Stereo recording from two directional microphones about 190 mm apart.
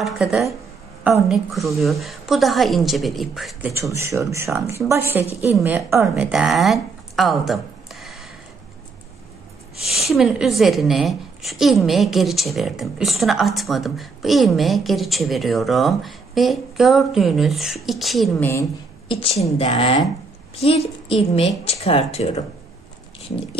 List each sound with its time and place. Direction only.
0.0 s speech: centre (ahead or behind)
3.7 s speech: 15° right (ahead or behind)
9.8 s speech: centre (ahead or behind)
18.4 s a woman's voice: 15° left (ahead or behind)
19.0 s a woman's voice: 25° left (ahead or behind)